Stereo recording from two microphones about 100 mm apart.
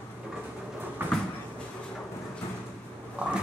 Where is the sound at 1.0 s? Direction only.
20° right (ahead or behind).